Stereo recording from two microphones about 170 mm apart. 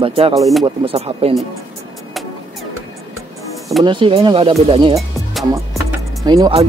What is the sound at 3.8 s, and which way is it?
Speech, 30° right (ahead or behind).